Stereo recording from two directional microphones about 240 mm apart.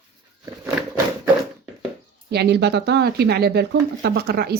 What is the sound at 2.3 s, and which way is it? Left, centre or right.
Speech, right.